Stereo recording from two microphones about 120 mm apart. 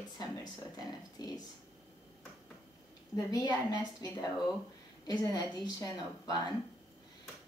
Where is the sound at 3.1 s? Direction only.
35° left (ahead or behind).